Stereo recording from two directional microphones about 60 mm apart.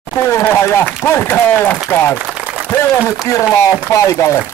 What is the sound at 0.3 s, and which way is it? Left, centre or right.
Speech, left.